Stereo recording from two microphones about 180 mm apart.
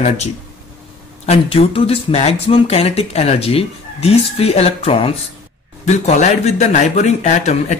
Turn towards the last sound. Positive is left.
turn(degrees=40)  # may be behind; listen again after turning